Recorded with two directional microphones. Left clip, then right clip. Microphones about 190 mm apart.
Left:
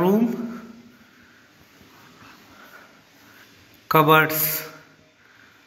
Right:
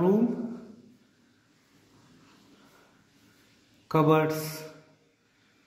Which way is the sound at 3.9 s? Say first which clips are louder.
Left 8 dB; centre (ahead or behind).